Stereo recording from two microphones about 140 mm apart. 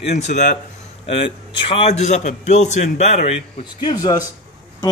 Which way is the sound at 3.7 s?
30° left (ahead or behind).